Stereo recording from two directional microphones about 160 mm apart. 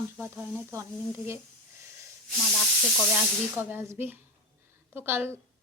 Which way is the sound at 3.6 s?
15° right (ahead or behind).